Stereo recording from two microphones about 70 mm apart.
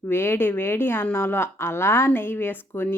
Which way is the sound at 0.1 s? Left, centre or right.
Left.